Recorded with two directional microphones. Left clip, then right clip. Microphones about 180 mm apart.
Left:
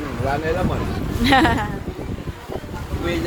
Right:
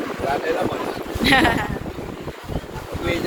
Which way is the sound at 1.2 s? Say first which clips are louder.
Even; 30° left (ahead or behind).